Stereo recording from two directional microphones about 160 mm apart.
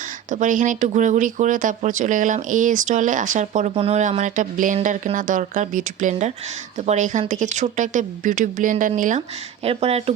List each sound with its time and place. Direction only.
0.3 s speech: 55° right (ahead or behind)
3.8 s speech: 40° right (ahead or behind)
4.2 s speech: 55° right (ahead or behind)
9.6 s speech: 40° right (ahead or behind)